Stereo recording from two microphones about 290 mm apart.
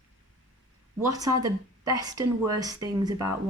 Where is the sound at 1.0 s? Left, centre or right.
Centre.